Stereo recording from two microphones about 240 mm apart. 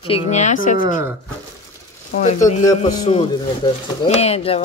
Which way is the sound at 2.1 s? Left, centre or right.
Left.